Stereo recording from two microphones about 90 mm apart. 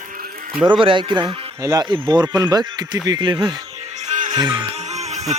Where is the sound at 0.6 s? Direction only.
65° right (ahead or behind).